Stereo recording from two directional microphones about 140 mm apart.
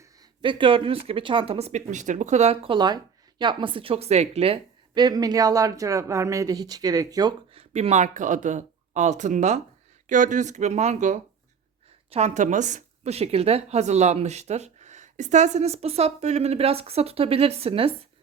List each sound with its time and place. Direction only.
0.0 s a woman's voice: 30° right (ahead or behind); by 2.7 s 50° right (ahead or behind)
2.7 s speech: 30° right (ahead or behind)
5.0 s speech: 25° right (ahead or behind)
7.5 s a woman's voice: 45° right (ahead or behind)